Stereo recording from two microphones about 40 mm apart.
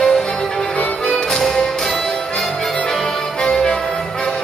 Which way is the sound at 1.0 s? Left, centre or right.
Centre.